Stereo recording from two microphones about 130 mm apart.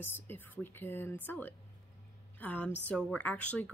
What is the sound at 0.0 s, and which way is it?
A woman's voice, 15° left (ahead or behind).